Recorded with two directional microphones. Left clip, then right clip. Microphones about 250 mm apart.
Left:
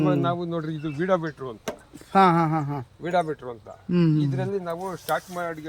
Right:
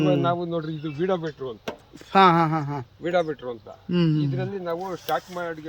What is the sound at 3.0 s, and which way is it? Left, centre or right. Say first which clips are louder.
Speech: right 1 dB; left.